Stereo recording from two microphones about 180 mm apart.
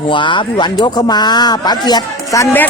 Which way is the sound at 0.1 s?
25° left (ahead or behind).